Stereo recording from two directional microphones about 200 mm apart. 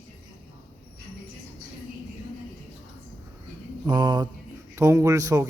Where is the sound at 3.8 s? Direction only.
20° right (ahead or behind).